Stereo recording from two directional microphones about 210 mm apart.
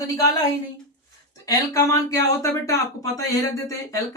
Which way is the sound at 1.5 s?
15° left (ahead or behind).